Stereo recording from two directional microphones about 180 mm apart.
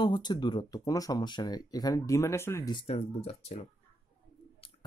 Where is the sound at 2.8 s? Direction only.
35° left (ahead or behind).